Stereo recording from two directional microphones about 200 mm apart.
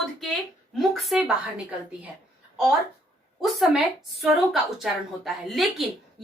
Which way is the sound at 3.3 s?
Centre (ahead or behind).